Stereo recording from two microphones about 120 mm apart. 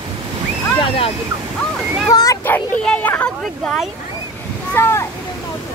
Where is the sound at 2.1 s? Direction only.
30° left (ahead or behind).